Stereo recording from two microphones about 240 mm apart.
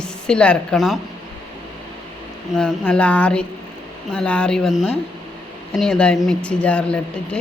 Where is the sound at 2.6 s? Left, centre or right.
Centre.